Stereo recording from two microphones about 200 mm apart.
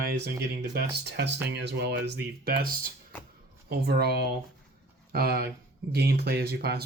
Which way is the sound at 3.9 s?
55° right (ahead or behind).